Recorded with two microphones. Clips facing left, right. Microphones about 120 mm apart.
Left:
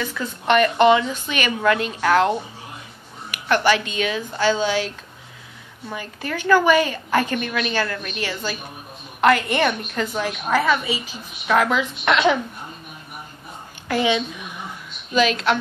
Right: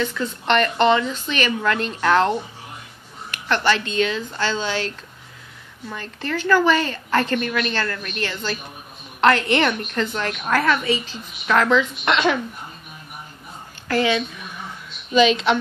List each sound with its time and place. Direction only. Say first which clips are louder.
0.0 s a woman's voice: right 2 dB; 10° left (ahead or behind)
13.8 s a woman's voice: even; 15° left (ahead or behind)
15.1 s a woman's voice: right 2 dB; centre (ahead or behind)